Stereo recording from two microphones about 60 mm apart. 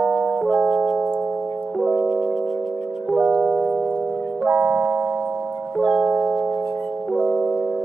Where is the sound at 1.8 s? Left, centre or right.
Centre.